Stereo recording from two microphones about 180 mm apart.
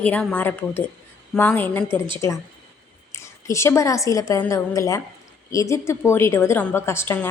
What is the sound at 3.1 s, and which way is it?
A woman's voice, 15° left (ahead or behind).